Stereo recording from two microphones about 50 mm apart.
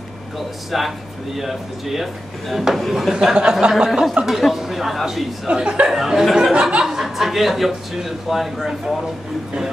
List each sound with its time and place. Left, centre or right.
0.7 s speech: centre
5.5 s speech: right
5.9 s speech: centre